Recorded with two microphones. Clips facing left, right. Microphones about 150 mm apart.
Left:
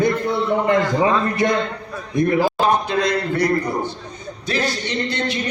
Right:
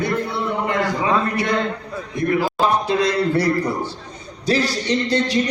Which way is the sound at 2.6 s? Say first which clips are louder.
Even; 35° right (ahead or behind).